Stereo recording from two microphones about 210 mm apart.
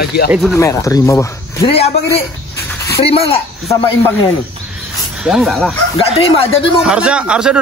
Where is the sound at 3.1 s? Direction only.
25° left (ahead or behind).